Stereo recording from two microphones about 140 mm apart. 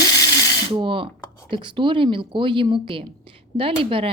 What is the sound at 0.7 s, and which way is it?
Speech, 35° right (ahead or behind).